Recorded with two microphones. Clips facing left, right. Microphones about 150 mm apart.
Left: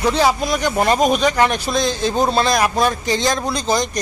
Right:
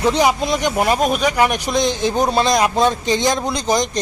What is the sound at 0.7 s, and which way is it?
Speech, 5° right (ahead or behind).